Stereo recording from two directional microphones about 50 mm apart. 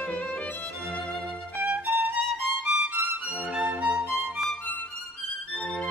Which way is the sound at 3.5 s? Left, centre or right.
Right.